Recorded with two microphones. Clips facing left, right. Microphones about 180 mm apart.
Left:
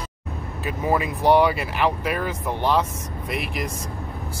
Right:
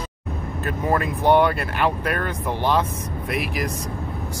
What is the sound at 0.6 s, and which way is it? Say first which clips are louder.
Speech: even; 5° left (ahead or behind).